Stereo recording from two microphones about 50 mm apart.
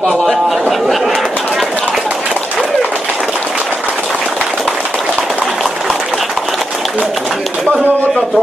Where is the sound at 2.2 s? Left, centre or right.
Right.